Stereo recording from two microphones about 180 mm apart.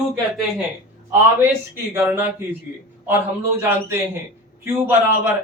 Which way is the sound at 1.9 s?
10° right (ahead or behind).